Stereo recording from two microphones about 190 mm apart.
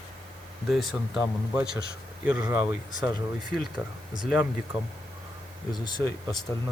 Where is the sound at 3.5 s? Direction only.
Centre (ahead or behind).